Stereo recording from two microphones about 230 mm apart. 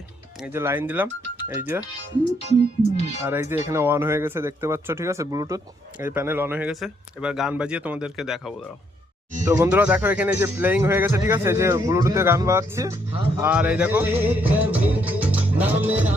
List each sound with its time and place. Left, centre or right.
0.3 s speech: centre
2.4 s speech: left
3.2 s speech: centre
9.5 s speech: centre